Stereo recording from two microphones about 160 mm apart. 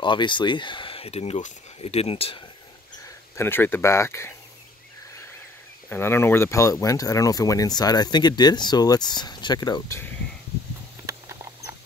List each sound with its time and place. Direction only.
0.0 s speech: 30° left (ahead or behind)
3.3 s speech: 15° left (ahead or behind)
5.9 s speech: 15° left (ahead or behind)
11.1 s rodents: 20° right (ahead or behind)